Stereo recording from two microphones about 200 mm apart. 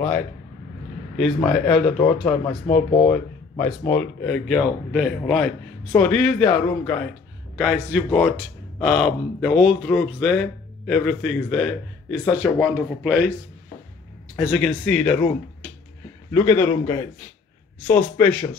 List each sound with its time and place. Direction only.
1.1 s speech: centre (ahead or behind)
2.6 s speech: 35° left (ahead or behind)
3.1 s a man's voice: 10° left (ahead or behind)
14.4 s speech: centre (ahead or behind)
16.3 s a man's voice: 10° left (ahead or behind)